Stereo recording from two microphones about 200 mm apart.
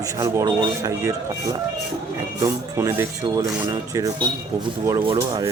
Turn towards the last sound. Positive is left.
turn(degrees=-20)  # may be behind; listen again after turning